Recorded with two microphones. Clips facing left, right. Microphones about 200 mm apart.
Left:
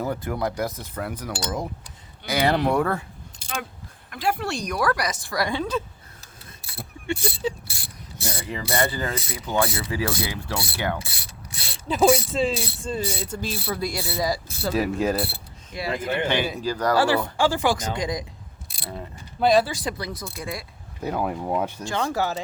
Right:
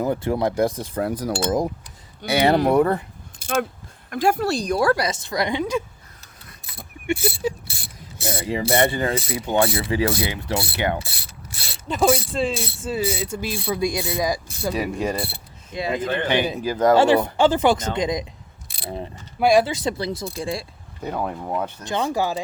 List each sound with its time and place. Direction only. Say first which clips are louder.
0.0 s speech: right 5 dB; 25° right (ahead or behind)
0.9 s cutlery: right 7 dB; 35° right (ahead or behind)
2.2 s speech: right 4 dB; 25° right (ahead or behind)
3.4 s speech: right 10 dB; 45° right (ahead or behind); by 5.8 s 15° right (ahead or behind)
7.1 s speech: right 4 dB; 10° right (ahead or behind)
8.5 s speech: right 5 dB; 25° right (ahead or behind)
11.9 s speech: left 1 dB; centre (ahead or behind); by 14.7 s 15° right (ahead or behind)
14.7 s speech: left 1 dB; centre (ahead or behind)
15.7 s speech: right 3 dB; 20° right (ahead or behind)
19.6 s speech: right 5 dB; 25° right (ahead or behind)
21.0 s speech: left 1 dB; 5° left (ahead or behind)
21.8 s speech: right 5 dB; 15° right (ahead or behind)